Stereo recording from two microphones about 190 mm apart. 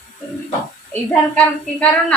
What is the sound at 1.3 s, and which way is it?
Speech, 5° left (ahead or behind).